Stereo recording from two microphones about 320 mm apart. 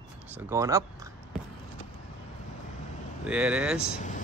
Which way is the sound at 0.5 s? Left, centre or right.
Centre.